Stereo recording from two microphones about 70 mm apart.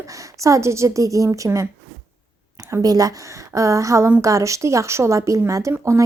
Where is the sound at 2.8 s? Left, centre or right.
Right.